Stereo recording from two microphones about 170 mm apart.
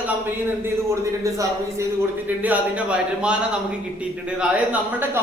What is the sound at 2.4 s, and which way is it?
Speech, 10° right (ahead or behind).